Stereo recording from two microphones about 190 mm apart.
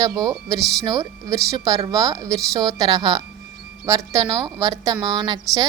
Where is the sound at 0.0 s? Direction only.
20° right (ahead or behind).